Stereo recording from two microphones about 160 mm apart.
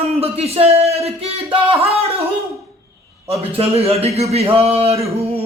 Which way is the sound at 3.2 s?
40° right (ahead or behind).